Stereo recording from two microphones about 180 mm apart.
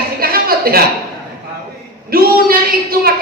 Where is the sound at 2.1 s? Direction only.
55° right (ahead or behind).